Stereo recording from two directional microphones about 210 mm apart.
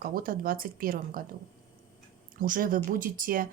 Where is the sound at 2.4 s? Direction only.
40° right (ahead or behind).